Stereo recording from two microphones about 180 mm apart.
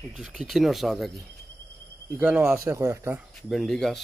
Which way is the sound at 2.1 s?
10° right (ahead or behind).